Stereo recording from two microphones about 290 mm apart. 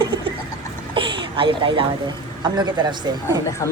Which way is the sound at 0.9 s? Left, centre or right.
Centre.